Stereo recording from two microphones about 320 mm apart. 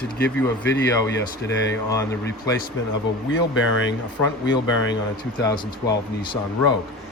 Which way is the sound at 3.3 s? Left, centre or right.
Left.